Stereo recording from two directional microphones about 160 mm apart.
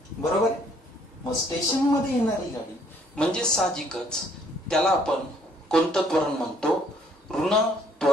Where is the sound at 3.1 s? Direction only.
5° left (ahead or behind).